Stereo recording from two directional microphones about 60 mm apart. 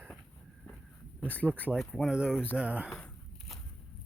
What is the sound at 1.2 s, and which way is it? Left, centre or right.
Speech, left.